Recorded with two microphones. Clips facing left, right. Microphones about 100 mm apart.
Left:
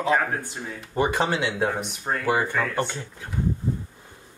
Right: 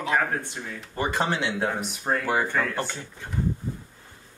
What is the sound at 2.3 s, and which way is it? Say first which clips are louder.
Speech: left 4 dB; 10° left (ahead or behind).